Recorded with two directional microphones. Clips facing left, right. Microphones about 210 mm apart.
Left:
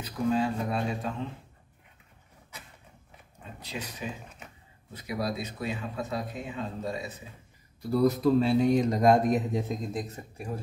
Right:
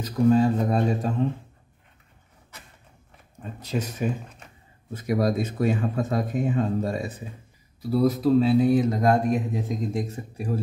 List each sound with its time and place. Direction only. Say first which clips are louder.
0.0 s speech: right 8 dB; 40° right (ahead or behind)
3.5 s speech: right 10 dB; 45° right (ahead or behind)
7.8 s speech: right 2 dB; 5° right (ahead or behind)
9.9 s speech: right 6 dB; 30° right (ahead or behind)